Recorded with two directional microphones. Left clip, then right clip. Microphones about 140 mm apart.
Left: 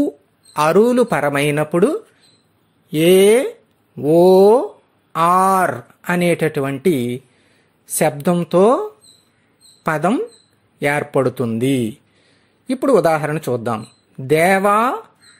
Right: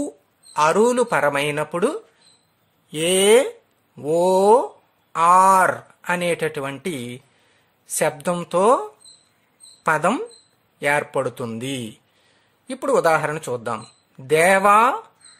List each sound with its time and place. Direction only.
0.5 s speech: 25° left (ahead or behind)
9.8 s speech: 20° left (ahead or behind)